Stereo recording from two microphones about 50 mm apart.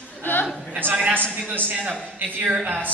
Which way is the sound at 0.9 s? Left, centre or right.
Right.